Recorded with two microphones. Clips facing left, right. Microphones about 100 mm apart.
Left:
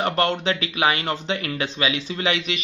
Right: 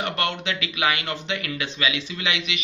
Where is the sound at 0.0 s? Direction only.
35° left (ahead or behind).